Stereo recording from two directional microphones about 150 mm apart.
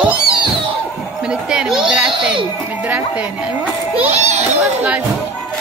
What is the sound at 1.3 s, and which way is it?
Chatter, 5° right (ahead or behind).